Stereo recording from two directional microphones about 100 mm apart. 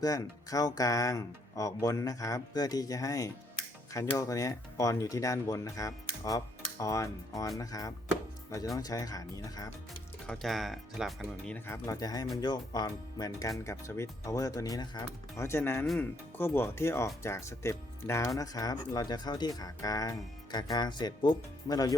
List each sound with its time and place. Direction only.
0.0 s speech: 35° left (ahead or behind)
10.2 s speech: centre (ahead or behind)
11.4 s speech: 20° left (ahead or behind)
11.9 s speech: 40° left (ahead or behind)
13.7 s speech: 30° left (ahead or behind)